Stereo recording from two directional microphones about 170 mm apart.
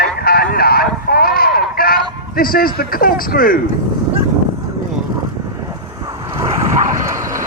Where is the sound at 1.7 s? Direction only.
60° left (ahead or behind).